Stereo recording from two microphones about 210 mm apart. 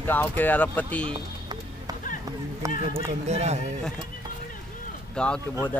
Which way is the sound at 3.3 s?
30° right (ahead or behind).